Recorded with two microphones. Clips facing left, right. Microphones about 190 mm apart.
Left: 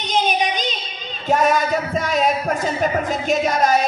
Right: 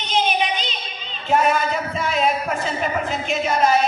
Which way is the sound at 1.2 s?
40° left (ahead or behind).